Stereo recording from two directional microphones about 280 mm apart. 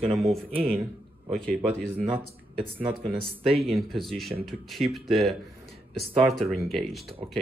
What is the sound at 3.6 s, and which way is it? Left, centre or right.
Speech, centre.